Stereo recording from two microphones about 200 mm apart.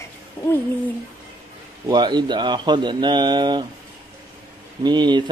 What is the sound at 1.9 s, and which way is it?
Speech, 20° right (ahead or behind).